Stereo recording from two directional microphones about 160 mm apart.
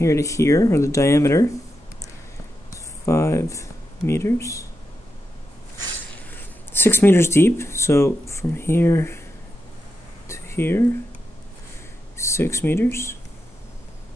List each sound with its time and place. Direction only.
0.0 s speech: 20° left (ahead or behind)
2.7 s speech: 15° left (ahead or behind)
6.3 s speech: 15° left (ahead or behind)
10.2 s a sound: 15° left (ahead or behind)
12.2 s speech: 15° left (ahead or behind)